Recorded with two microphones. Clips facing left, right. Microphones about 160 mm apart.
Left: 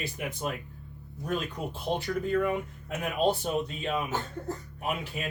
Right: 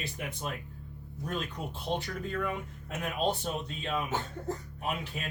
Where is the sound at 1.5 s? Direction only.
10° left (ahead or behind).